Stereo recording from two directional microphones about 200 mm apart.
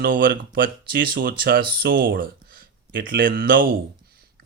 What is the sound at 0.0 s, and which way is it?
Speech, 45° right (ahead or behind).